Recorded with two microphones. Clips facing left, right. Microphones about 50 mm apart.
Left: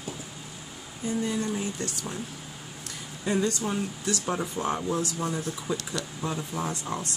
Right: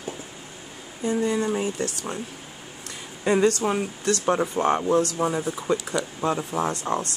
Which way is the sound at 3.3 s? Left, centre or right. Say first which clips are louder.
Right 7 dB; right.